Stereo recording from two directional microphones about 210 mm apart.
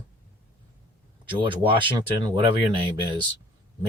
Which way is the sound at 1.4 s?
25° right (ahead or behind).